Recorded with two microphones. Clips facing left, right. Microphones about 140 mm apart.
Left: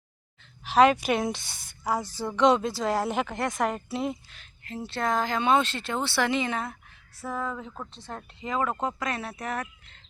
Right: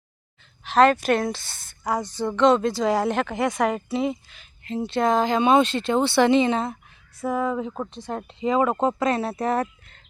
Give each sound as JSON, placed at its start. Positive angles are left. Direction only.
{"t": 0.6, "sound": "a woman's voice", "side_deg": 10}
{"t": 4.6, "sound": "speech", "side_deg": -20}